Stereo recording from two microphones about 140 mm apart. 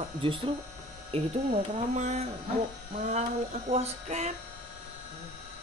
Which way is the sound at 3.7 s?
50° right (ahead or behind).